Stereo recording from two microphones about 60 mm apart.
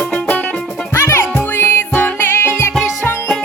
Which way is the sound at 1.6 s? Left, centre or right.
Left.